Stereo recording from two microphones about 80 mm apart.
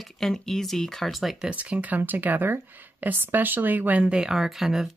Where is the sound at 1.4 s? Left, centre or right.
Centre.